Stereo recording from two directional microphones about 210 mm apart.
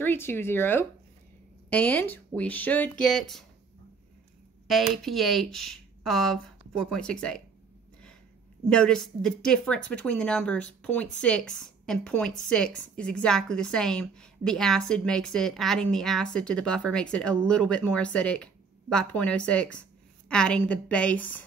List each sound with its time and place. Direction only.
0.0 s speech: 10° left (ahead or behind)
4.9 s a woman's voice: centre (ahead or behind)
8.6 s a woman's voice: 5° left (ahead or behind)